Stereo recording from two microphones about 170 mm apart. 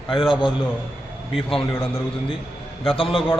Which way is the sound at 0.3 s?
30° left (ahead or behind).